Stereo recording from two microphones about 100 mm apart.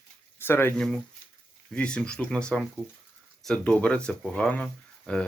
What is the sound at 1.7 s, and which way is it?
Speech, 10° left (ahead or behind).